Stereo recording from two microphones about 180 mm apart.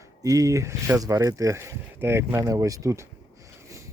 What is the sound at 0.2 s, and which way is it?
Speech, 20° right (ahead or behind).